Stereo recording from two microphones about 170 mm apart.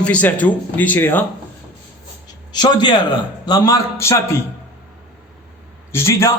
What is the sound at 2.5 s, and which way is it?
A man's voice, 25° left (ahead or behind).